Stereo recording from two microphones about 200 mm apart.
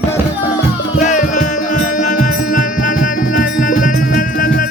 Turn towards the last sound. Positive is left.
turn(degrees=45)  # may be behind; listen again after turning